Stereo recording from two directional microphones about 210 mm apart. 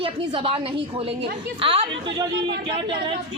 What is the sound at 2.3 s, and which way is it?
Speech, 55° right (ahead or behind).